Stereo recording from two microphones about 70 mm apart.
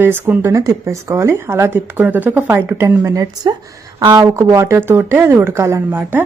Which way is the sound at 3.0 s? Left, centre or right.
Right.